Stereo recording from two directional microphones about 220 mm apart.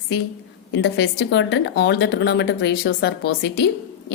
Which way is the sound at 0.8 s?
50° left (ahead or behind).